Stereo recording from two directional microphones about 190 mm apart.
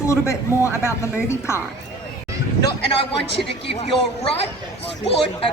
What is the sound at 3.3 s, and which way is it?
Speech, 65° left (ahead or behind).